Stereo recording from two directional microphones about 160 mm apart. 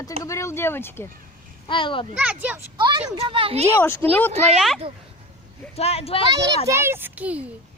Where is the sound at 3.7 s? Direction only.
15° left (ahead or behind).